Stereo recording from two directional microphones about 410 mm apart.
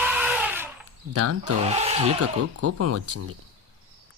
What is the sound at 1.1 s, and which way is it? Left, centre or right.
Speech, right.